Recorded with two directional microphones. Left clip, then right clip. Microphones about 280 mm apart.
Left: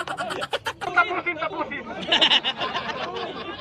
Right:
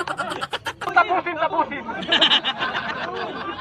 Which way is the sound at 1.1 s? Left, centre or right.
Right.